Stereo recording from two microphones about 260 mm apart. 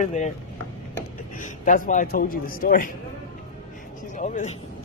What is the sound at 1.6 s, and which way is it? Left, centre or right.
A man's voice, left.